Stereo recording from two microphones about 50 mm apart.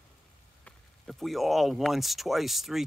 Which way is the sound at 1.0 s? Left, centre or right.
Centre.